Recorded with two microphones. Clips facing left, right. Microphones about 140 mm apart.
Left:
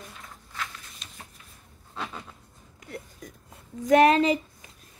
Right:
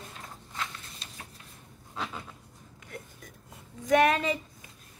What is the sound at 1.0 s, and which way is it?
Shuffling cards, 35° right (ahead or behind).